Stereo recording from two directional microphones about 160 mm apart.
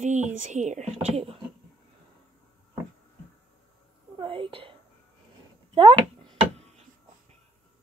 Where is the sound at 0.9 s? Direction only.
35° right (ahead or behind).